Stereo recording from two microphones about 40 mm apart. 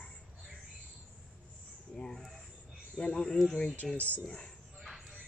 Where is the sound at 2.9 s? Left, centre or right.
Centre.